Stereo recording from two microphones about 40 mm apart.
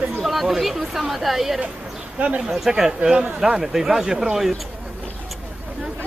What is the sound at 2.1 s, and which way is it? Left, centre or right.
Speech, right.